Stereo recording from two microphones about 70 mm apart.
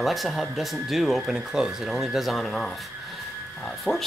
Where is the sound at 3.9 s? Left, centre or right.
Centre.